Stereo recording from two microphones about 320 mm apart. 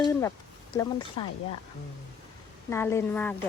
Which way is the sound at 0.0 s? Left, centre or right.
Centre.